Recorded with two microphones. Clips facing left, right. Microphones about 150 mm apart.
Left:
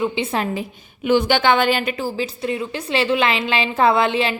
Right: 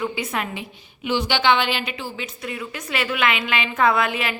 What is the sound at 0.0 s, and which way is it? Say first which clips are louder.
A woman's voice: left 5 dB; 25° left (ahead or behind).